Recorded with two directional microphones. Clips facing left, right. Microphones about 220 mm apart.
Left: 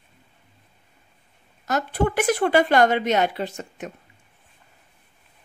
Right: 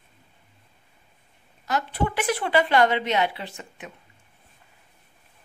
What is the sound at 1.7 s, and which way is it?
Speech, 45° left (ahead or behind).